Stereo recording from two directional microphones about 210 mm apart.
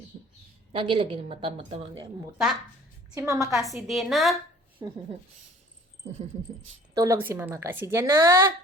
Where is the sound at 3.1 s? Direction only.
15° right (ahead or behind).